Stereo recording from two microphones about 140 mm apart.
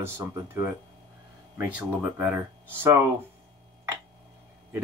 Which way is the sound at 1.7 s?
10° right (ahead or behind).